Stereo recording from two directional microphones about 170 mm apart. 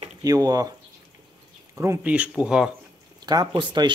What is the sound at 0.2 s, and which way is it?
Speech, 20° right (ahead or behind).